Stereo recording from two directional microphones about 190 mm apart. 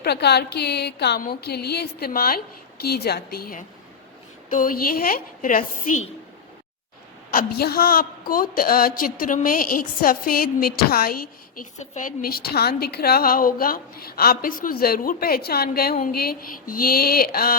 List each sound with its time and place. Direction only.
0.0 s a woman's voice: 60° left (ahead or behind)
7.3 s a woman's voice: 50° left (ahead or behind)